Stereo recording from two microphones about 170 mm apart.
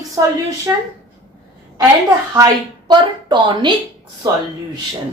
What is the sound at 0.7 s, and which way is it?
Speech, 10° right (ahead or behind).